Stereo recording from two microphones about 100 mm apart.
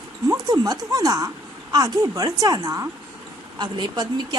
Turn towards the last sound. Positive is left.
turn(degrees=-45)  # may be behind; listen again after turning